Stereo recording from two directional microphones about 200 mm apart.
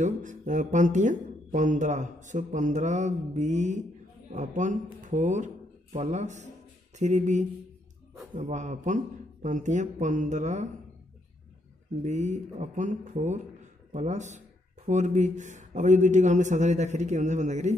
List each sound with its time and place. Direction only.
0.0 s speech: 40° right (ahead or behind)
12.0 s speech: 35° right (ahead or behind)